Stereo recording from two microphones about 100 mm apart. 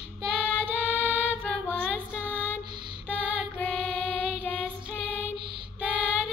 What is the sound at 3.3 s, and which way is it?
Music, 15° left (ahead or behind).